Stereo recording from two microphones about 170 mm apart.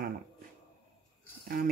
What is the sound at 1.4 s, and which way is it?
Speech, 60° right (ahead or behind).